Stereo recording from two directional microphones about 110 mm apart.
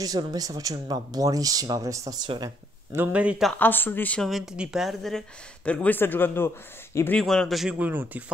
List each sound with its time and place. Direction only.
0.0 s speech: 35° right (ahead or behind)
3.1 s speech: 10° right (ahead or behind)
3.5 s speech: 15° left (ahead or behind)
4.2 s speech: centre (ahead or behind)
5.7 s speech: 15° left (ahead or behind)
7.2 s speech: 5° left (ahead or behind)
7.8 s speech: 15° right (ahead or behind)